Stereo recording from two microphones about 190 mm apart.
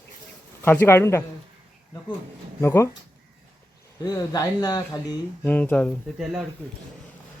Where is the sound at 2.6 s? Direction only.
15° left (ahead or behind).